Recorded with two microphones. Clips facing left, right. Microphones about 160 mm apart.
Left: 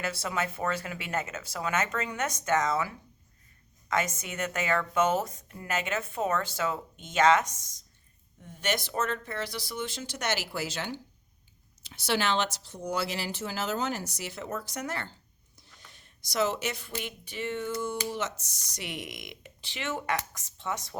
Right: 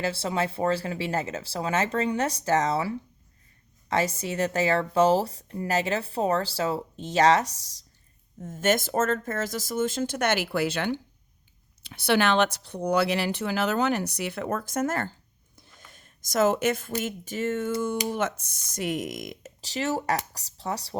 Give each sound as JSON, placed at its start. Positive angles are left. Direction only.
{"t": 0.0, "sound": "speech", "side_deg": -30}